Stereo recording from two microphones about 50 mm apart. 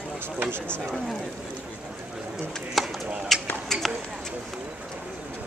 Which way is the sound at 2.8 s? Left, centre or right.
Centre.